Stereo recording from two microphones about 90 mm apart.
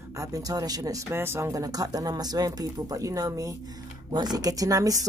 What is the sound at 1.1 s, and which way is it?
Speech, 25° right (ahead or behind).